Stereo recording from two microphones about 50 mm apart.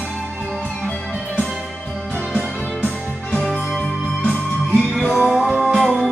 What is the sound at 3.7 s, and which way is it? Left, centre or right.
Music, centre.